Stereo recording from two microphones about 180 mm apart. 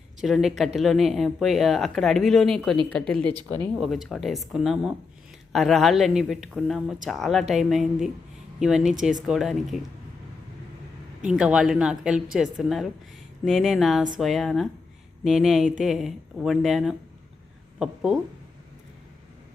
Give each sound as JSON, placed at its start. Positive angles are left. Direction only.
{"t": 0.2, "sound": "speech", "side_deg": 0}
{"t": 3.3, "sound": "speech", "side_deg": -25}
{"t": 3.8, "sound": "speech", "side_deg": 0}
{"t": 11.3, "sound": "speech", "side_deg": -5}